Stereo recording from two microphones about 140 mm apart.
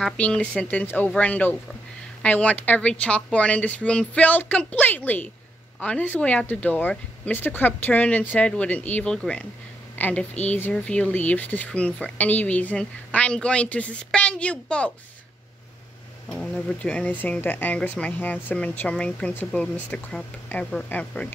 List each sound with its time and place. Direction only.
0.0 s a woman's voice: 5° left (ahead or behind)
16.3 s speech: 5° left (ahead or behind)